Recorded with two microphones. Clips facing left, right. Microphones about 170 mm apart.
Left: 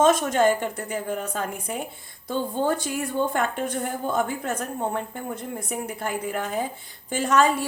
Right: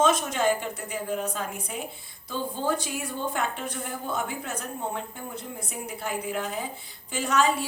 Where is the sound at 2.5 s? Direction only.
50° left (ahead or behind).